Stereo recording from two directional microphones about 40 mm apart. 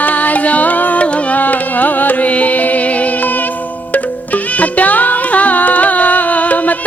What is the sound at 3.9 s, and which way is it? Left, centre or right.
Music, left.